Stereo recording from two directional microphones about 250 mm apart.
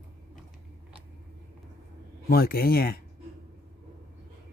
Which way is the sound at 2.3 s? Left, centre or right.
Left.